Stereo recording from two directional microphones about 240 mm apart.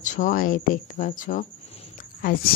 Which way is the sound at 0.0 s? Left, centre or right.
Left.